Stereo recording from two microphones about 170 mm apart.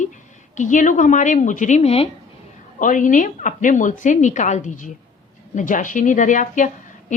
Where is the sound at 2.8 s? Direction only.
50° left (ahead or behind).